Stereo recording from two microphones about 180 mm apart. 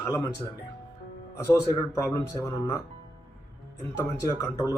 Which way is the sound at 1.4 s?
15° left (ahead or behind).